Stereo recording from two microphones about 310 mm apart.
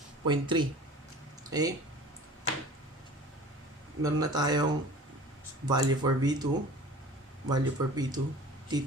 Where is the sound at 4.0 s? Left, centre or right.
Centre.